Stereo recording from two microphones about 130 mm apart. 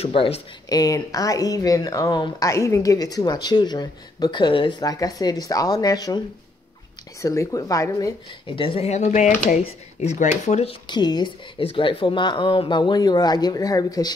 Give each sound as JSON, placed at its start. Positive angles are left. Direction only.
{"t": 0.0, "sound": "speech", "side_deg": 50}
{"t": 0.7, "sound": "speech", "side_deg": 30}
{"t": 8.5, "sound": "speech", "side_deg": 45}
{"t": 9.6, "sound": "speech", "side_deg": 60}
{"t": 10.7, "sound": "speech", "side_deg": 35}